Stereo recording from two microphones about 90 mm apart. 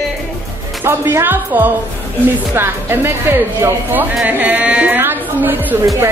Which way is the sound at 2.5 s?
25° right (ahead or behind).